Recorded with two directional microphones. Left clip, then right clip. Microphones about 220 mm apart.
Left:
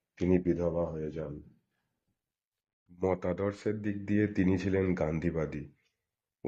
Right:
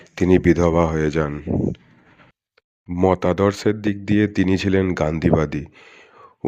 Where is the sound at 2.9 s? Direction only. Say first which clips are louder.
Right 14 dB; 30° right (ahead or behind).